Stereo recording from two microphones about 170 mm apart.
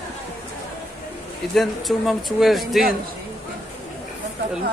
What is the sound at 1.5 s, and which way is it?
Speech, centre (ahead or behind).